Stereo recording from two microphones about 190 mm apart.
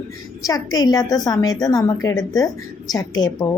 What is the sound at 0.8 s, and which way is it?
A woman's voice, 20° left (ahead or behind).